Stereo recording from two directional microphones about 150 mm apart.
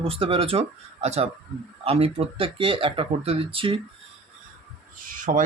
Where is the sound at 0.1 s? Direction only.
40° right (ahead or behind).